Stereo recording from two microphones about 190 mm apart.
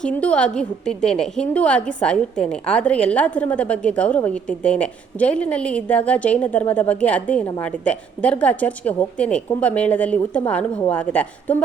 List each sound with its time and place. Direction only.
0.0 s a woman's voice: 5° left (ahead or behind)